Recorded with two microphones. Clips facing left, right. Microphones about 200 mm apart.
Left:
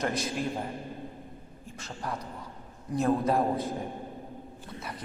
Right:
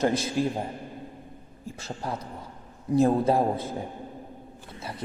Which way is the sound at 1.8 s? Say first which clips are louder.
Right 3 dB; 25° right (ahead or behind).